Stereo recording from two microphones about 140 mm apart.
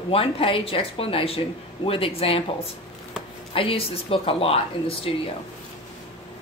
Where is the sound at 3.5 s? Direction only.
40° left (ahead or behind).